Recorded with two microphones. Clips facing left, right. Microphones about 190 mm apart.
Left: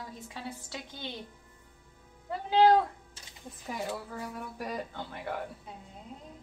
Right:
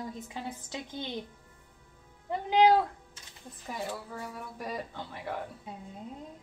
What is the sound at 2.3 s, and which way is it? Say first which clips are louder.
Speech: even; 15° right (ahead or behind).